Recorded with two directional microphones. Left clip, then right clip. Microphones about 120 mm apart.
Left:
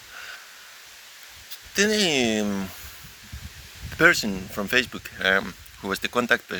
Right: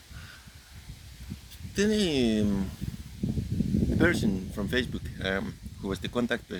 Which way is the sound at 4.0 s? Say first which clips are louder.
Left 9 dB; 30° right (ahead or behind).